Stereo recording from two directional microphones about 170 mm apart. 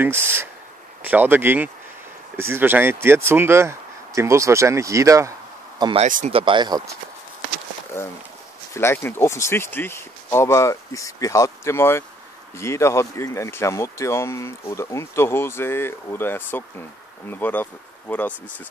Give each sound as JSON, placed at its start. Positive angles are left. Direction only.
{"t": 0.0, "sound": "speech", "side_deg": -15}
{"t": 6.0, "sound": "speech", "side_deg": -50}
{"t": 6.3, "sound": "speech", "side_deg": -30}
{"t": 8.0, "sound": "speech", "side_deg": 15}